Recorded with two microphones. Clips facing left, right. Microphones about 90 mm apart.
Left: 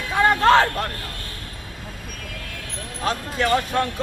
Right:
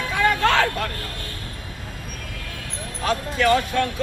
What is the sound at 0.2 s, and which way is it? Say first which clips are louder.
Music: left 4 dB; 35° left (ahead or behind).